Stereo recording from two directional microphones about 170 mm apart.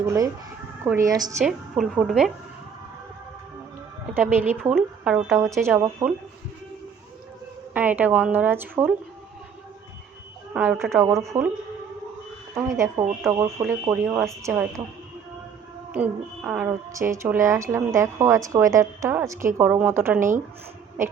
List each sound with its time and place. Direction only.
0.0 s a woman's voice: 15° right (ahead or behind)
1.4 s a woman's voice: centre (ahead or behind)
4.7 s a woman's voice: 5° right (ahead or behind)
5.4 s a woman's voice: 15° right (ahead or behind)
7.7 s a woman's voice: 10° right (ahead or behind)
10.5 s a woman's voice: 10° right (ahead or behind)
12.5 s a woman's voice: 15° right (ahead or behind)
15.9 s a woman's voice: 10° right (ahead or behind)